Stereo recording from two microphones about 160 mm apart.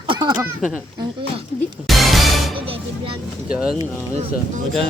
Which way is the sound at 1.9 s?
Centre (ahead or behind).